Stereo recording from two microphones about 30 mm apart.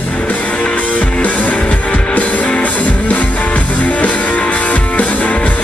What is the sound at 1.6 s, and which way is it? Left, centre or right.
Music, left.